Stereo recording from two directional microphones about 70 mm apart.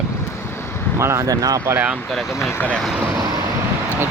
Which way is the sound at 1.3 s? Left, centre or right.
Right.